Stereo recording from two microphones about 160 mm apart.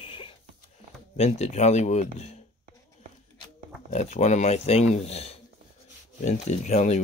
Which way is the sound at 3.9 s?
45° left (ahead or behind).